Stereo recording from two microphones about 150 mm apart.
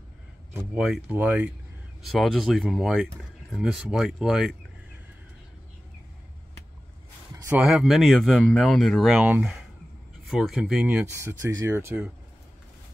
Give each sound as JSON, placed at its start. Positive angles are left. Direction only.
{"t": 0.7, "sound": "speech", "side_deg": -5}
{"t": 2.0, "sound": "speech", "side_deg": 0}
{"t": 7.6, "sound": "speech", "side_deg": 0}
{"t": 11.1, "sound": "speech", "side_deg": -20}